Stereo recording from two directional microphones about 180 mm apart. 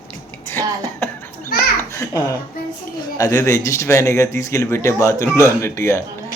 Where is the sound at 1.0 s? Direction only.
10° left (ahead or behind).